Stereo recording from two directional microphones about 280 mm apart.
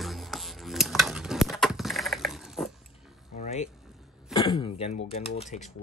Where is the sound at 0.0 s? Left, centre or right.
Centre.